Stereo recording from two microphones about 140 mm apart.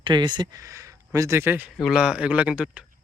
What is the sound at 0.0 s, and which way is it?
Speech, 35° right (ahead or behind).